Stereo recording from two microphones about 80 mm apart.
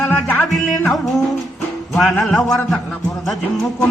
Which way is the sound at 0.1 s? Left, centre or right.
Centre.